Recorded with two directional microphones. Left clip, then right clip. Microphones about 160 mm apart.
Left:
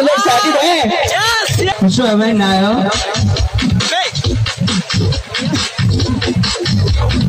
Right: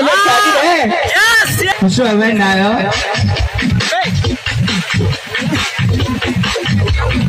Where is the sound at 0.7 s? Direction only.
35° right (ahead or behind).